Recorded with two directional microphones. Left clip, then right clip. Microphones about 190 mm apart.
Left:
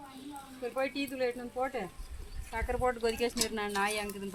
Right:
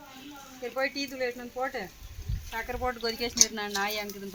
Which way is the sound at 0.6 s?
35° left (ahead or behind).